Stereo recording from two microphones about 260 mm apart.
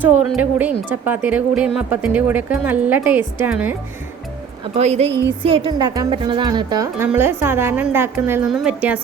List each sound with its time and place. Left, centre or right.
0.0 s speech: centre
4.7 s a woman's voice: right; by 9.0 s centre